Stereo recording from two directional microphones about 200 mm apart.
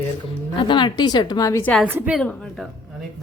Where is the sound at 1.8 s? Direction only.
10° right (ahead or behind).